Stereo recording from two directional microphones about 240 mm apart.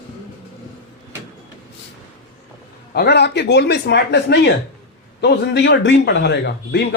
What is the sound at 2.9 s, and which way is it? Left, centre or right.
A man's voice, left.